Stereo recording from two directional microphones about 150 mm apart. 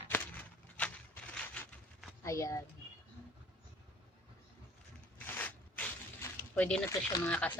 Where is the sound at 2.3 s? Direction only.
20° left (ahead or behind).